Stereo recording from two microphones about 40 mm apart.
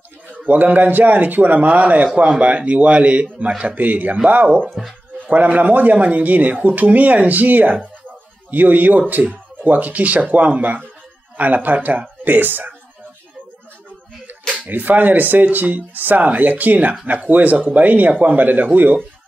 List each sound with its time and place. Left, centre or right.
0.5 s a man's voice: right
3.7 s speech: right
4.6 s speech: centre
5.3 s a man's voice: right
12.3 s speech: right
14.7 s speech: right